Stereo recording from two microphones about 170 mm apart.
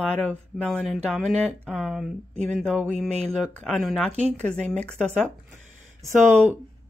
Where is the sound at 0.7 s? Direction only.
5° left (ahead or behind).